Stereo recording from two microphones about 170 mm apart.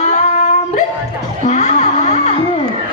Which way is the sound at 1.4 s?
40° left (ahead or behind).